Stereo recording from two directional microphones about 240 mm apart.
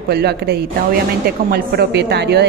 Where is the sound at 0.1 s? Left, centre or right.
Right.